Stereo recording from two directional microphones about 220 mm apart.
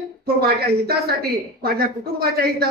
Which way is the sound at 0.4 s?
45° right (ahead or behind).